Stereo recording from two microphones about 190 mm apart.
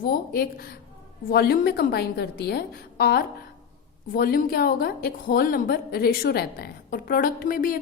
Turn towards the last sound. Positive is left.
turn(degrees=45)  # may be behind; listen again after turning